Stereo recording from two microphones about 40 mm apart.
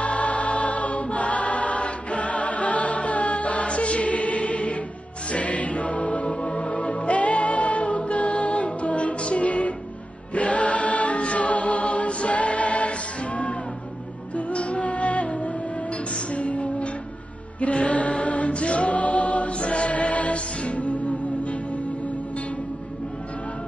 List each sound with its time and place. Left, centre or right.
0.0 s choir: left
5.3 s music: left
10.3 s choir: left
14.3 s music: left
17.6 s choir: left